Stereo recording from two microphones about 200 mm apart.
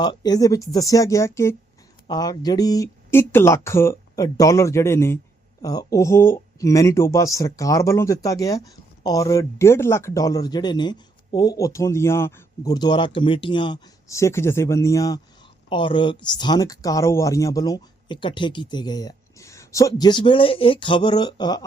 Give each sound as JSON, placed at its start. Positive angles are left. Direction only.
{"t": 0.0, "sound": "speech", "side_deg": 20}